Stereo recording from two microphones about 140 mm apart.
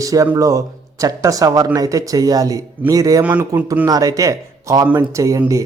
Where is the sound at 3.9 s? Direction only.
25° right (ahead or behind).